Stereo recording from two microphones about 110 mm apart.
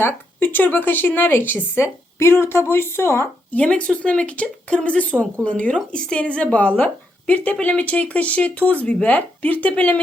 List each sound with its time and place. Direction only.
0.0 s a woman's voice: 15° left (ahead or behind)
3.6 s speech: 10° left (ahead or behind)